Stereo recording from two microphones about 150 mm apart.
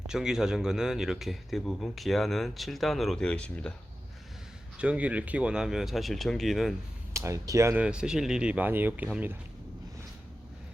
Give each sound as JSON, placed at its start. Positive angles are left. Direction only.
{"t": 0.1, "sound": "speech", "side_deg": -5}
{"t": 4.8, "sound": "speech", "side_deg": -10}
{"t": 7.1, "sound": "speech", "side_deg": -20}
{"t": 7.8, "sound": "speech", "side_deg": -5}